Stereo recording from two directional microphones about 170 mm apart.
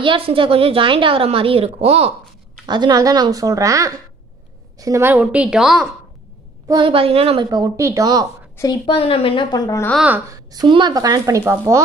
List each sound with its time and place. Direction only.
0.0 s a woman's voice: 30° right (ahead or behind)
2.6 s a woman's voice: 25° right (ahead or behind)
5.2 s a woman's voice: 5° right (ahead or behind)
6.7 s a woman's voice: 30° right (ahead or behind)
7.5 s speech: 20° right (ahead or behind)
8.8 s a woman's voice: 35° left (ahead or behind)
10.0 s a woman's voice: 10° right (ahead or behind)
10.5 s speech: 25° right (ahead or behind)